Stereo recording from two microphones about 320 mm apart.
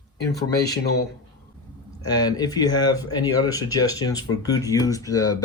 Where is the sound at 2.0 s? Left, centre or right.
Centre.